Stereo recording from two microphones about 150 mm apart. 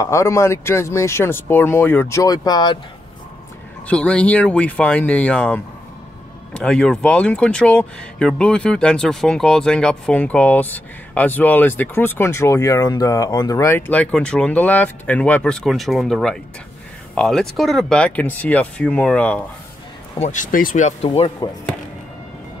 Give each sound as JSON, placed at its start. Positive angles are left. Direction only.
{"t": 0.0, "sound": "speech", "side_deg": 20}
{"t": 3.8, "sound": "speech", "side_deg": 10}
{"t": 20.2, "sound": "speech", "side_deg": 60}